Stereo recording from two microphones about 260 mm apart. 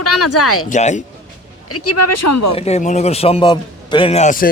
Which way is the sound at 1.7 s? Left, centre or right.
Left.